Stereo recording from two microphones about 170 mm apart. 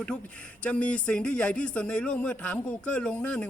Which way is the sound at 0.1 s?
5° left (ahead or behind).